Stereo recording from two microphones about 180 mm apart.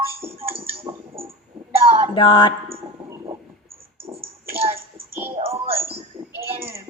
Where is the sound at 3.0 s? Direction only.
15° right (ahead or behind).